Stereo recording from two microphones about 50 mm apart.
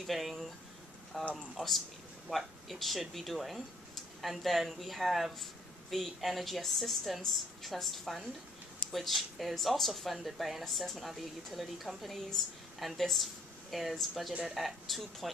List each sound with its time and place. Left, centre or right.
0.0 s speech: centre